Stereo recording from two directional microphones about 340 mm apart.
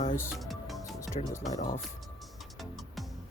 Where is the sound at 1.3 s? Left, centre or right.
Centre.